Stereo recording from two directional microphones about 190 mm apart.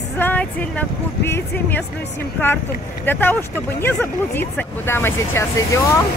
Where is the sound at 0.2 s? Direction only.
10° left (ahead or behind).